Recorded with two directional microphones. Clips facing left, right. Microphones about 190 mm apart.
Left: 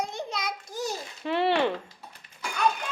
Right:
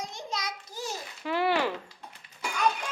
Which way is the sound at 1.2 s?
25° left (ahead or behind).